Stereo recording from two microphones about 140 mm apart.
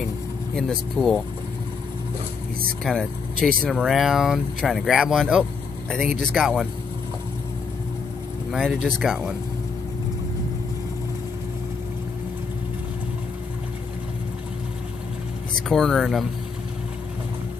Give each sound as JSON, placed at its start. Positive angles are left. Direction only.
{"t": 0.6, "sound": "speech", "side_deg": 5}
{"t": 2.8, "sound": "speech", "side_deg": 5}
{"t": 8.5, "sound": "speech", "side_deg": 0}
{"t": 15.7, "sound": "speech", "side_deg": 5}